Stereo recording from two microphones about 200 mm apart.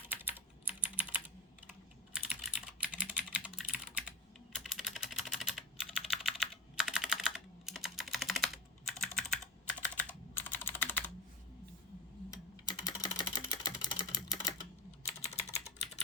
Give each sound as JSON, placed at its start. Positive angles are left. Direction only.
{"t": 0.1, "sound": "typing", "side_deg": -10}
{"t": 8.9, "sound": "computer keyboard", "side_deg": 0}
{"t": 12.3, "sound": "typing", "side_deg": 20}
{"t": 15.3, "sound": "typing", "side_deg": 30}